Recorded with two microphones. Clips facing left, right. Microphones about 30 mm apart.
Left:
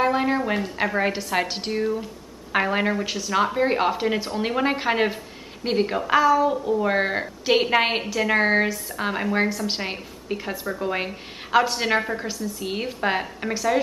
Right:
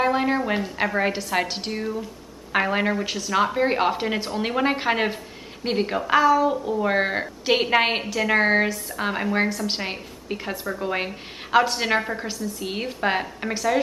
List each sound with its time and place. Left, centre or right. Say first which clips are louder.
0.0 s a woman's voice: even; centre